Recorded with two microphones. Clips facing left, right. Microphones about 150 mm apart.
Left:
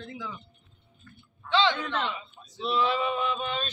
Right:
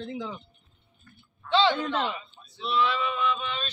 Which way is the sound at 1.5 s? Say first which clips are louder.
Right 2 dB; 15° right (ahead or behind).